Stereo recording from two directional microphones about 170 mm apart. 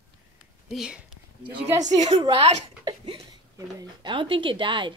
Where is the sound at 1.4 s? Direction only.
25° right (ahead or behind).